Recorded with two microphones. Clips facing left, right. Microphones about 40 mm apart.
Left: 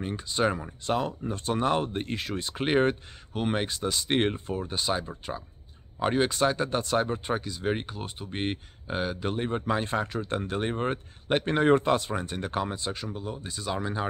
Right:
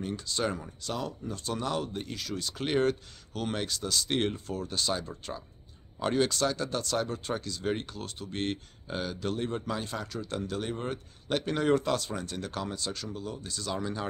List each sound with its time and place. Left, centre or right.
0.0 s speech: left